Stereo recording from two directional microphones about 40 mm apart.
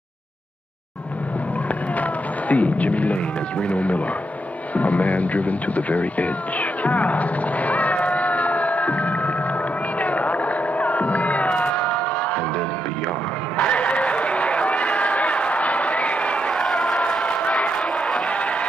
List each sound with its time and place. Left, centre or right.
2.0 s music: left
3.6 s speech: left
9.9 s a sound: left
11.7 s music: left
13.6 s run: left
16.5 s crowd: centre
17.3 s crowd: left
18.3 s music: left